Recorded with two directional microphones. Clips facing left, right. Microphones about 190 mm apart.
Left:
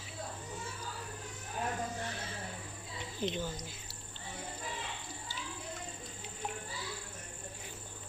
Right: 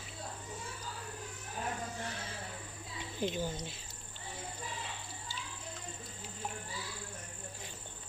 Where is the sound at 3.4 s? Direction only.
25° right (ahead or behind).